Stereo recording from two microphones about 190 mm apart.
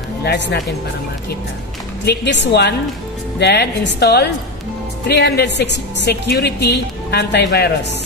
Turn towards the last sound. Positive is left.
turn(degrees=60)  # may be behind; listen again after turning